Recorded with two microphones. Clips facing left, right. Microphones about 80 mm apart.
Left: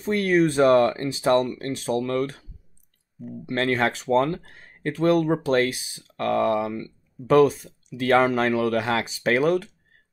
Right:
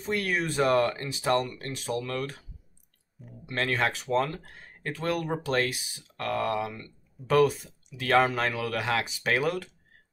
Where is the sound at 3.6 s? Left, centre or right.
Left.